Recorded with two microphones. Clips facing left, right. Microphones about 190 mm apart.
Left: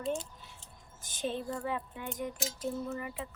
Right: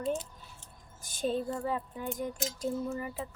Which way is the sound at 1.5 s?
30° right (ahead or behind).